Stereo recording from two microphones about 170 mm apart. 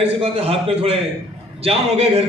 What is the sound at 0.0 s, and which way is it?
A man's voice, 35° right (ahead or behind).